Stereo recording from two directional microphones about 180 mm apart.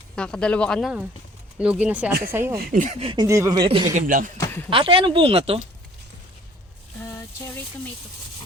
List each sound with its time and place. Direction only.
0.2 s speech: 5° left (ahead or behind); by 2.6 s 15° right (ahead or behind)
2.6 s speech: 50° right (ahead or behind)
3.0 s speech: 30° right (ahead or behind)
3.2 s speech: 15° right (ahead or behind)
3.9 s speech: 50° right (ahead or behind)
4.4 s speech: 10° left (ahead or behind)
4.7 s speech: 30° right (ahead or behind)
7.0 s a sound: 15° left (ahead or behind)